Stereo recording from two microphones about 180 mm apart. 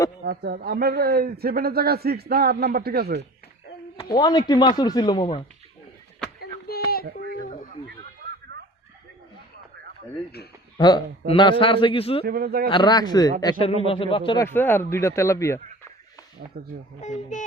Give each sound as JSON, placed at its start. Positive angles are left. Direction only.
{"t": 0.3, "sound": "a man's voice", "side_deg": -60}
{"t": 3.9, "sound": "speech", "side_deg": 25}
{"t": 6.4, "sound": "a sound", "side_deg": 60}
{"t": 10.8, "sound": "speech", "side_deg": 25}
{"t": 12.2, "sound": "a man's voice", "side_deg": -55}
{"t": 12.7, "sound": "speech", "side_deg": 25}
{"t": 14.4, "sound": "speech", "side_deg": 10}
{"t": 16.5, "sound": "a man's voice", "side_deg": -60}
{"t": 17.0, "sound": "speech", "side_deg": 40}